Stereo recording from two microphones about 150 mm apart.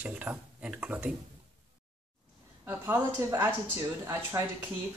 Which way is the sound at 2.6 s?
10° right (ahead or behind).